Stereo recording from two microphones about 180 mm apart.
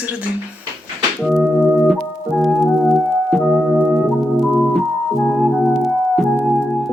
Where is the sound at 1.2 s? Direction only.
Centre (ahead or behind).